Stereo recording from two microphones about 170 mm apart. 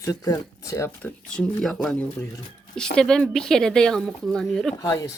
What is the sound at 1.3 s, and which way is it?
Speech, 5° left (ahead or behind).